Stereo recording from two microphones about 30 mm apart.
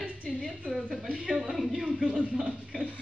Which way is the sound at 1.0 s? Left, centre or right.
Right.